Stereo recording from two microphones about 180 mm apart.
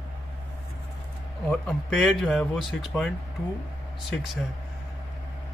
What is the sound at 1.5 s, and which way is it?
Speech, 5° left (ahead or behind).